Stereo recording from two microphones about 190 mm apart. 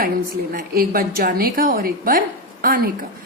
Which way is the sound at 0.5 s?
50° right (ahead or behind).